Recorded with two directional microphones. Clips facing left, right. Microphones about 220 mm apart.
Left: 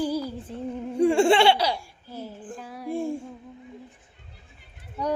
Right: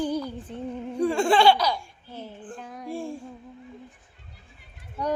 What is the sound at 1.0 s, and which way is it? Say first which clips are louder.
Laughter: left 3 dB; 25° left (ahead or behind).